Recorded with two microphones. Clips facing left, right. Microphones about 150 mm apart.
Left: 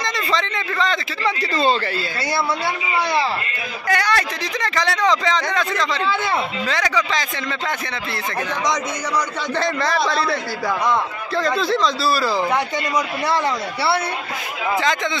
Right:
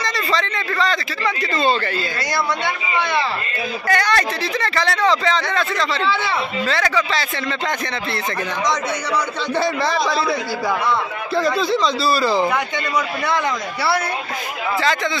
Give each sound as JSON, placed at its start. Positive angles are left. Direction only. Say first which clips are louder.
{"t": 0.0, "sound": "a sound", "louder": "right 1 dB", "side_deg": 20}
{"t": 3.8, "sound": "a man's voice", "louder": "right 1 dB", "side_deg": 10}
{"t": 9.6, "sound": "a man's voice", "louder": "right 1 dB", "side_deg": -10}